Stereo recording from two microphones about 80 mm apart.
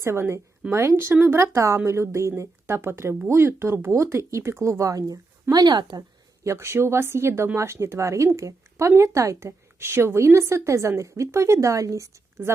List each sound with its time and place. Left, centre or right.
0.0 s a woman's voice: right
6.4 s a woman's voice: right